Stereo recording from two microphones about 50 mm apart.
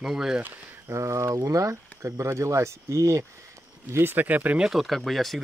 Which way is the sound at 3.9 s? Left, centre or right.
Right.